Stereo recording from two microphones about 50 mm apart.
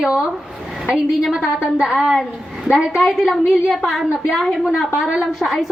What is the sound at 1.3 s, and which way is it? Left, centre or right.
Speech, centre.